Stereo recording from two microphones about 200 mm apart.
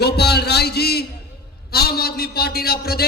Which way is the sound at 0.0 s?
55° left (ahead or behind).